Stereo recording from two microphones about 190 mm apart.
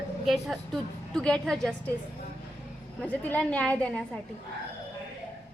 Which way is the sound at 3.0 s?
10° left (ahead or behind).